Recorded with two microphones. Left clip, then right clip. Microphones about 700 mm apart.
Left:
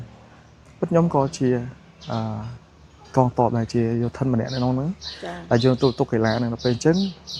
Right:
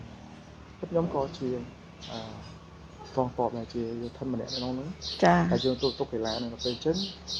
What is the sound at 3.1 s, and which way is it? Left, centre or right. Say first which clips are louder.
Speech: left 9 dB; left.